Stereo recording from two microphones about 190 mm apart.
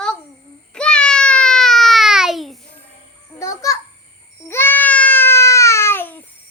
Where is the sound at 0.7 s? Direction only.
5° left (ahead or behind).